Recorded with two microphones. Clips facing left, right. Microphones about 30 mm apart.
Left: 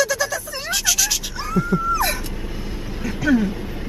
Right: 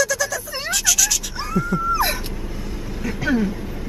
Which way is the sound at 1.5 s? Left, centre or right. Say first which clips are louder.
Left 2 dB; centre.